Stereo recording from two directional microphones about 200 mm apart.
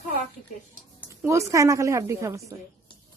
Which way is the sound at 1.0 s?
15° right (ahead or behind).